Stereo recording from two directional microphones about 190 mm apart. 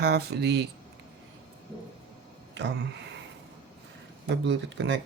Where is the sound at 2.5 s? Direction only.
65° right (ahead or behind).